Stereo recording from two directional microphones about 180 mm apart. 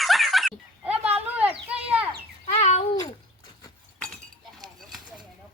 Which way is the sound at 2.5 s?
35° left (ahead or behind).